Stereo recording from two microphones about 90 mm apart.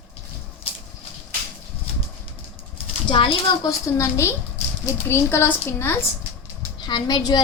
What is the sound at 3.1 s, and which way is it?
Speech, 80° left.